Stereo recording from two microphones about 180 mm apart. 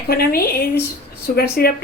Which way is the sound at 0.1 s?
60° left (ahead or behind).